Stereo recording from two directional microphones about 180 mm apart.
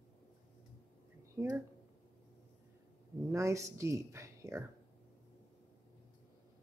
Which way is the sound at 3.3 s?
15° right (ahead or behind).